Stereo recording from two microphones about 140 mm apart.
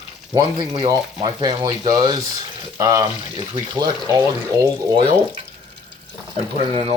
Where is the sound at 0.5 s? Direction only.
35° right (ahead or behind).